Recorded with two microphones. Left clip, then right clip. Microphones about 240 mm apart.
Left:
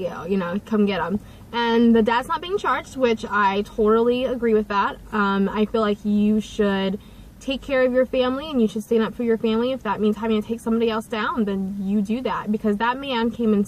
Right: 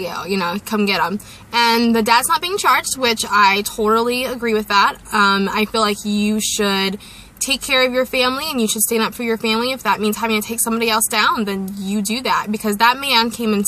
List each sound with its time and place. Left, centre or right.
0.0 s a woman's voice: centre